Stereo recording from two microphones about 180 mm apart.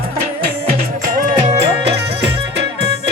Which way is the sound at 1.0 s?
50° right (ahead or behind).